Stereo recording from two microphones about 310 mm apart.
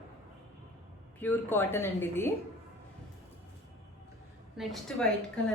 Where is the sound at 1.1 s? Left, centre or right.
Centre.